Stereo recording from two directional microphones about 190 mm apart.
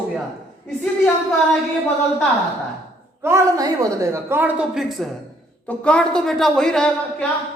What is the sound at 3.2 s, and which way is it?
A woman's voice, 15° right (ahead or behind).